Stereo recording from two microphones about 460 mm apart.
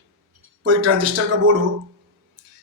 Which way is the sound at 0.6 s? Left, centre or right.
Right.